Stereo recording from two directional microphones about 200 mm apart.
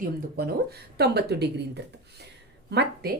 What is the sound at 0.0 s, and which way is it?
A woman's voice, 50° right (ahead or behind).